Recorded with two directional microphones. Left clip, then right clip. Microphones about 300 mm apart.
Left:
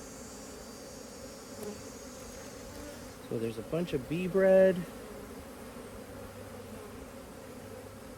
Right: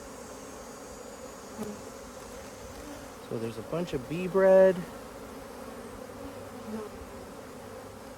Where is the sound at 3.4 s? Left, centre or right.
Centre.